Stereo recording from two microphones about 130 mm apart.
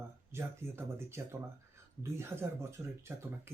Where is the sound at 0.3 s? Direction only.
20° right (ahead or behind).